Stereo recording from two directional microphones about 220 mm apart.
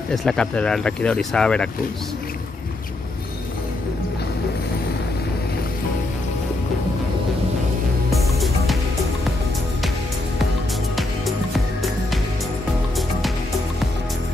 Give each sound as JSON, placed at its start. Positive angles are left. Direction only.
{"t": 0.1, "sound": "speech", "side_deg": 0}
{"t": 8.1, "sound": "music", "side_deg": 0}
{"t": 11.0, "sound": "music", "side_deg": 0}